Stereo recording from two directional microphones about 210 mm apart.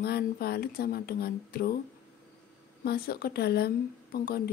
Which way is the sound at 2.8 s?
50° left (ahead or behind).